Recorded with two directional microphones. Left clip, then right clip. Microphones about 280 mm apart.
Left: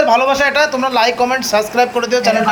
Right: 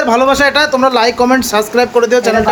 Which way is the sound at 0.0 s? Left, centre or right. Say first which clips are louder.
Right 2 dB; centre.